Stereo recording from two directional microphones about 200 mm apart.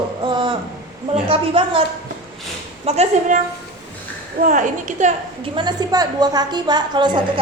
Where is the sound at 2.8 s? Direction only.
30° right (ahead or behind).